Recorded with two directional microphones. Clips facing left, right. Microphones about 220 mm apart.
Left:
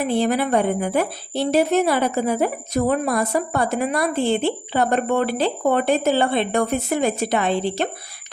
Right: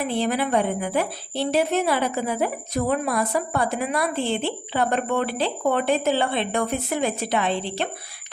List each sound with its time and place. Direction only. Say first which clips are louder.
0.0 s speech: left 4 dB; 45° left (ahead or behind)